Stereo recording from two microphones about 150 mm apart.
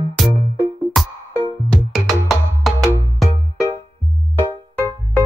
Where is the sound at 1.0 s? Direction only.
Centre (ahead or behind).